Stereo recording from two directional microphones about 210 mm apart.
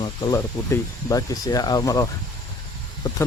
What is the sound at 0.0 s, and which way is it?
Speech, 20° left (ahead or behind).